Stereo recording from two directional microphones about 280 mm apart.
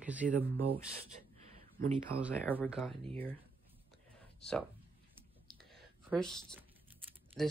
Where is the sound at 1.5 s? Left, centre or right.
Right.